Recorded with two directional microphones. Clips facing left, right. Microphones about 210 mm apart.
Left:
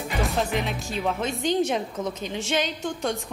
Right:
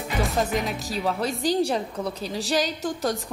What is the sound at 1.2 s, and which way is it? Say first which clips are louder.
A woman's voice: right 1 dB; 35° right (ahead or behind).